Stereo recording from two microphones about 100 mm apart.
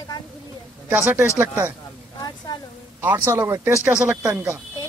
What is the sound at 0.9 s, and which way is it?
Speech, 15° right (ahead or behind).